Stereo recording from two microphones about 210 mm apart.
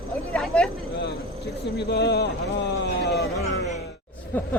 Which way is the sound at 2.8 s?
55° left (ahead or behind).